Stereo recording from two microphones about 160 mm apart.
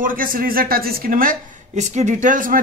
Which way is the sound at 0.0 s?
60° right (ahead or behind).